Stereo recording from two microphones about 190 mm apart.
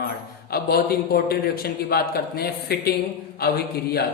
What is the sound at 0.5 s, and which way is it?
A man's voice, 55° left (ahead or behind).